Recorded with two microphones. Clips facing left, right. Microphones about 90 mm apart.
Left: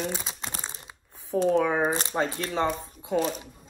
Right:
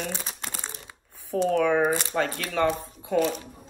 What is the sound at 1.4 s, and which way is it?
Speech, 20° left (ahead or behind).